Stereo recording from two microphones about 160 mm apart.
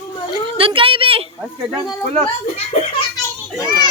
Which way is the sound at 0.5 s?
35° right (ahead or behind).